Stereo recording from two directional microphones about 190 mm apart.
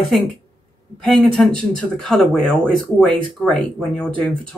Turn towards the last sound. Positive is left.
turn(degrees=5)  # may be behind; listen again after turning